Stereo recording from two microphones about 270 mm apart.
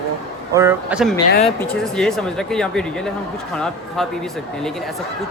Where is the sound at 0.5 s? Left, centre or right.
Centre.